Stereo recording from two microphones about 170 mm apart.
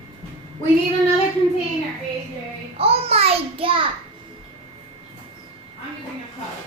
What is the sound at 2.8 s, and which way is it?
A child's voice, 35° right (ahead or behind).